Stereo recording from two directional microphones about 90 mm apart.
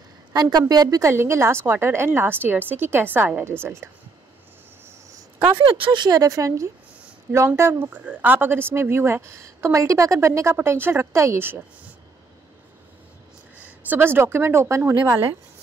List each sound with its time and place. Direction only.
0.3 s speech: 50° right (ahead or behind); by 3.9 s 30° right (ahead or behind)
5.8 s speech: 50° right (ahead or behind); by 7.9 s 30° right (ahead or behind)
7.9 s speech: 15° right (ahead or behind)
13.6 s speech: 20° right (ahead or behind)